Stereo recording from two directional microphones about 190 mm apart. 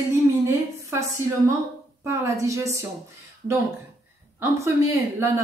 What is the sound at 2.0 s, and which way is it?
Speech, 15° right (ahead or behind).